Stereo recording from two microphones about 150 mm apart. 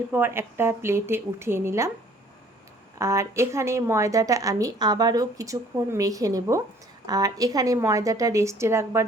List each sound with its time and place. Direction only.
0.1 s a woman's voice: 15° right (ahead or behind)
3.0 s speech: 20° right (ahead or behind)